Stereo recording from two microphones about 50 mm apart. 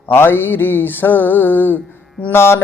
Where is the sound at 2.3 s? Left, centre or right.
Left.